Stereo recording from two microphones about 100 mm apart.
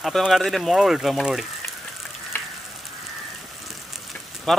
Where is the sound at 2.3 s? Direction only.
20° left (ahead or behind).